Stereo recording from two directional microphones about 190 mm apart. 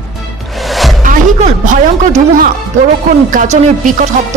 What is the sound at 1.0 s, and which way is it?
A woman's voice, 45° right (ahead or behind).